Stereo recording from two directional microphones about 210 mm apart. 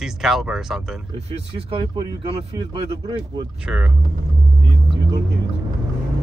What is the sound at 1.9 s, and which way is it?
Speech, 25° right (ahead or behind).